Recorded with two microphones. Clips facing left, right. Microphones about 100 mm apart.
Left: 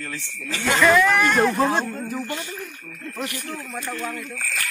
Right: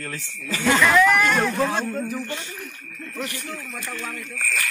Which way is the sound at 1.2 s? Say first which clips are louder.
Left 2 dB; 5° left (ahead or behind).